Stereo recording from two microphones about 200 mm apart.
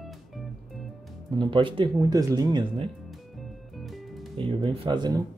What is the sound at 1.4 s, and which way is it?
Speech, 25° right (ahead or behind).